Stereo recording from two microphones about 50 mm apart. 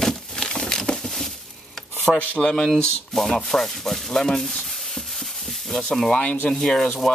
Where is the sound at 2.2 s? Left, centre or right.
Left.